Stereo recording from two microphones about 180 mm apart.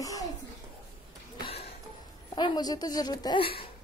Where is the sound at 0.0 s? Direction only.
20° left (ahead or behind).